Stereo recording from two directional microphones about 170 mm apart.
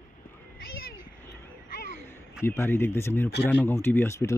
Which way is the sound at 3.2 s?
80° left.